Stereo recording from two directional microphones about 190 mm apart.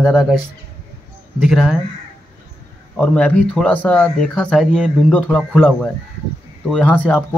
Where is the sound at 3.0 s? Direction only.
5° left (ahead or behind).